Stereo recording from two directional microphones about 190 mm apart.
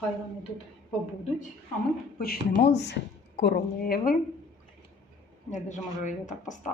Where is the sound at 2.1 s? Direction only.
55° left (ahead or behind).